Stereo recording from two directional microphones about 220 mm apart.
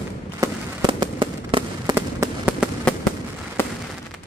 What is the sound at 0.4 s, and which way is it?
Fireworks, 20° right (ahead or behind).